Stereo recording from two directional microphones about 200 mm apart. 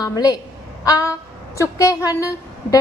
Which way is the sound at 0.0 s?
20° left (ahead or behind).